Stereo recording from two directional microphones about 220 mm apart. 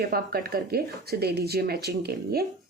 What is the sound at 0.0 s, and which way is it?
Speech, 40° right (ahead or behind).